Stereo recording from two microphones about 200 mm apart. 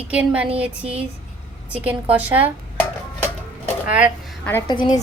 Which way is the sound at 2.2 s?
10° right (ahead or behind).